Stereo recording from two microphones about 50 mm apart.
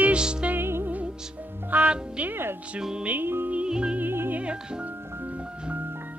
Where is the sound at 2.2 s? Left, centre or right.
Right.